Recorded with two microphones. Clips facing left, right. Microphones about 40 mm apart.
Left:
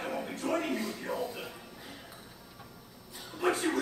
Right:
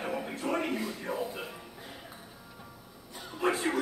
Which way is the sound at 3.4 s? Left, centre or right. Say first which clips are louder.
Even; centre.